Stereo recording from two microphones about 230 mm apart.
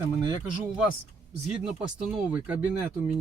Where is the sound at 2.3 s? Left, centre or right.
Centre.